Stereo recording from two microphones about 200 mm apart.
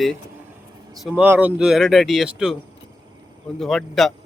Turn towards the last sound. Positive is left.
turn(degrees=0)  # may be behind; listen again after turning